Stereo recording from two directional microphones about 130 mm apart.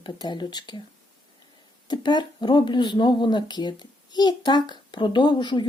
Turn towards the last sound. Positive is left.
turn(degrees=35)  # may be behind; listen again after turning